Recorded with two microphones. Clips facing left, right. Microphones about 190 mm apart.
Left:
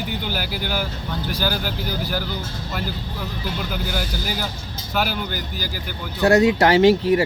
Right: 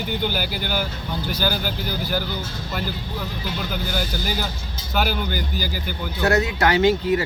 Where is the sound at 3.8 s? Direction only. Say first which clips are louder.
Right 1 dB; 5° left (ahead or behind).